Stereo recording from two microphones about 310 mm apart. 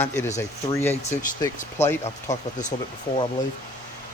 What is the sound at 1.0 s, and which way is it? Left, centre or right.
Speech, left.